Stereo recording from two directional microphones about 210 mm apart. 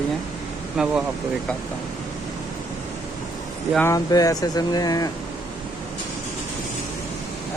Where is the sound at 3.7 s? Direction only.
15° left (ahead or behind).